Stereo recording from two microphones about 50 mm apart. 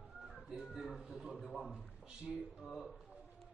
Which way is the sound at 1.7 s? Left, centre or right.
Centre.